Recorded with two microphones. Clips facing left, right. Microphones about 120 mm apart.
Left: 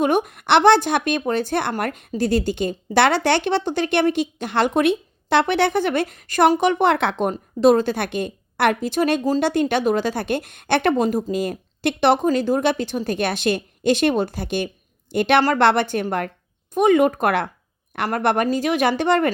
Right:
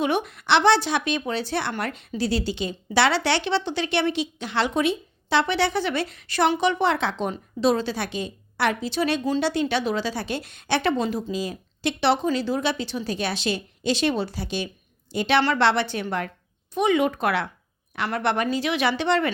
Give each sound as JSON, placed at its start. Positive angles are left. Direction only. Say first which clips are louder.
{"t": 0.0, "sound": "a woman's voice", "louder": "left 5 dB", "side_deg": 45}